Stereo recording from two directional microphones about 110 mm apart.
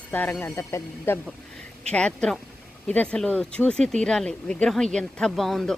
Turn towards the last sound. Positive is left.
turn(degrees=0)  # may be behind; listen again after turning